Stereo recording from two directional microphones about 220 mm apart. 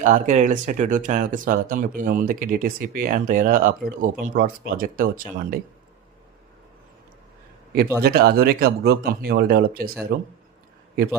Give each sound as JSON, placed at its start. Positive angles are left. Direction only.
{"t": 0.0, "sound": "speech", "side_deg": -35}
{"t": 8.0, "sound": "speech", "side_deg": -45}